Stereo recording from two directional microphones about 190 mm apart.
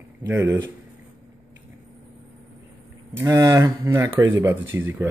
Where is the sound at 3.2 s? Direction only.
15° right (ahead or behind).